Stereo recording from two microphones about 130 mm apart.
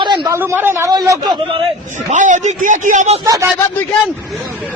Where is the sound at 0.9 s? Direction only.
25° right (ahead or behind).